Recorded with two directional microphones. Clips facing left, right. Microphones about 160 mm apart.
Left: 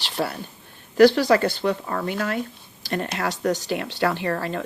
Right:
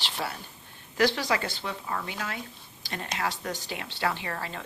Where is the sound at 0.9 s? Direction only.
65° left (ahead or behind).